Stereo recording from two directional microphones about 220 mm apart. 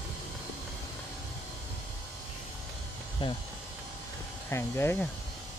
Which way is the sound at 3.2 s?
20° left (ahead or behind).